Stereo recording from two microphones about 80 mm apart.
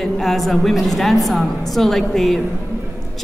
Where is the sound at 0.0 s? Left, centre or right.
Centre.